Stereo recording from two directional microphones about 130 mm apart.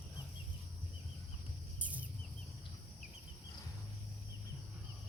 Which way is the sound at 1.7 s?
10° right (ahead or behind).